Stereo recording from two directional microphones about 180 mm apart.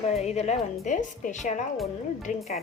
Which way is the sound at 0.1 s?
35° left (ahead or behind).